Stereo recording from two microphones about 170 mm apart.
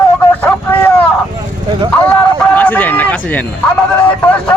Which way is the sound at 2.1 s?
10° left (ahead or behind).